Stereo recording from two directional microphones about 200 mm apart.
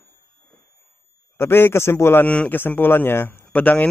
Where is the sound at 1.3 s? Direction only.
10° left (ahead or behind).